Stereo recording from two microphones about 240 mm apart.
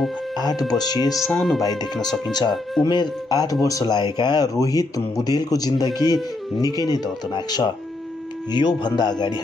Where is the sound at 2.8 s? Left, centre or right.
Centre.